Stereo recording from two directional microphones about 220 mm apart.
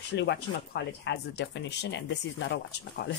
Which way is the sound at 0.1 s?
50° left (ahead or behind).